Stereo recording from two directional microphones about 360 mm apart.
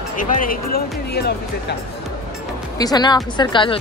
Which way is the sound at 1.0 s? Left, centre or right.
Left.